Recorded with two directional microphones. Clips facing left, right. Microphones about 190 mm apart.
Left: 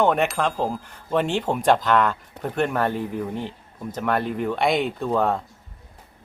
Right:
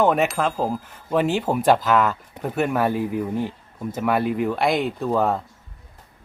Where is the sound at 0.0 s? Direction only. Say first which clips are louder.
Right 1 dB; 5° right (ahead or behind).